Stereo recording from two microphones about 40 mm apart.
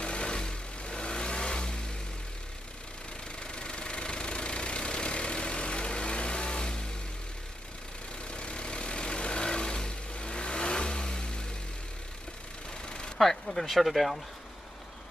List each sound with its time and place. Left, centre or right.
0.0 s vehicle: left
3.3 s engine: left
8.3 s vehicle: left
12.8 s a sound: left
13.2 s speech: centre